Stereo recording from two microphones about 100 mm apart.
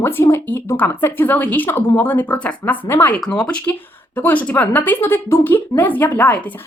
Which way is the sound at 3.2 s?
10° left (ahead or behind).